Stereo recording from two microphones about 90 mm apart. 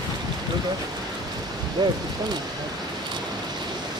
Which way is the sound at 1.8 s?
50° right (ahead or behind).